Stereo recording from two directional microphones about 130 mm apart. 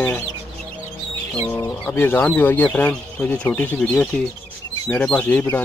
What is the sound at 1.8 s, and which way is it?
Speech, 15° left (ahead or behind).